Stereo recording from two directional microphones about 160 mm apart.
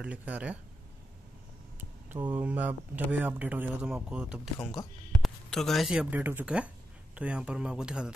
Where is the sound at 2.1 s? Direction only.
10° right (ahead or behind).